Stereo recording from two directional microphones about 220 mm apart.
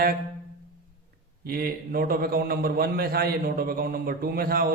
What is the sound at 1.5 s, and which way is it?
A man's voice, 45° right (ahead or behind).